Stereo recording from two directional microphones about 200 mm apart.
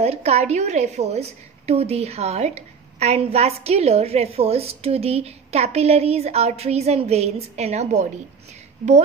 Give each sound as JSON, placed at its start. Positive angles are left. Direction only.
{"t": 0.0, "sound": "a woman's voice", "side_deg": -30}